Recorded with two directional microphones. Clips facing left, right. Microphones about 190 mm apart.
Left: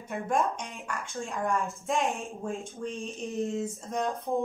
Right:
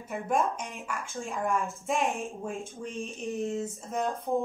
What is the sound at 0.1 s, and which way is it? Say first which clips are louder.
Speech: even; centre (ahead or behind).